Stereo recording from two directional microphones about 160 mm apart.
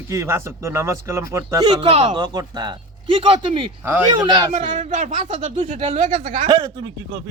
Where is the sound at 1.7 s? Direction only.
35° right (ahead or behind).